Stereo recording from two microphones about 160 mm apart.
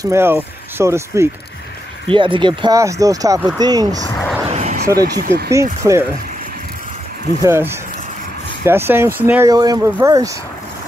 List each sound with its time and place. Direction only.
0.0 s speech: 15° right (ahead or behind)
2.0 s speech: 30° right (ahead or behind)
4.5 s a sound: 45° right (ahead or behind)
4.8 s speech: 20° right (ahead or behind)
5.2 s speech: 75° right (ahead or behind)
5.5 s speech: 20° right (ahead or behind)
7.4 s speech: 15° right (ahead or behind)